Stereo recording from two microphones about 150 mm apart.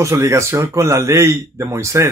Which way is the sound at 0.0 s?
20° right (ahead or behind).